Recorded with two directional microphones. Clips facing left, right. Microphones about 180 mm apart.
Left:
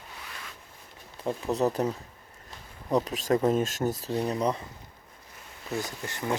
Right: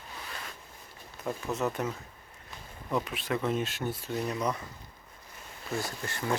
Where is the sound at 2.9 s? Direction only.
40° left (ahead or behind).